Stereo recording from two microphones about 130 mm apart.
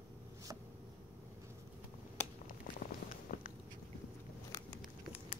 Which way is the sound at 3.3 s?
90° left.